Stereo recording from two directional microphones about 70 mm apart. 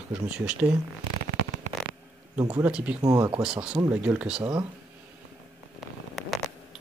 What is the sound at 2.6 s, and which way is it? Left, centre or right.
Speech, right.